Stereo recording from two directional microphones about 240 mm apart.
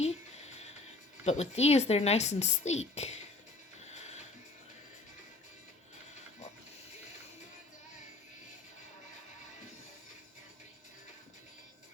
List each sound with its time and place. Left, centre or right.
0.0 s music: left
1.2 s speech: left
3.8 s music: left